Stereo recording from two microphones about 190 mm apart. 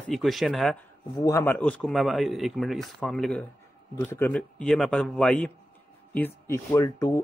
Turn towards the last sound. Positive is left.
turn(degrees=15)  # may be behind; listen again after turning